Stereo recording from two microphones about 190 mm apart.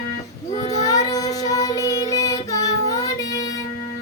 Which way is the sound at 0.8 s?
20° left (ahead or behind).